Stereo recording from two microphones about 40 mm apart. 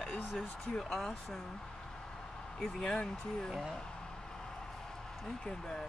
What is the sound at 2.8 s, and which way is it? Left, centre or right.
Speech, left.